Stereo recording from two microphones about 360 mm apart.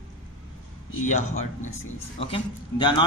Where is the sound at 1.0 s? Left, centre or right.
Centre.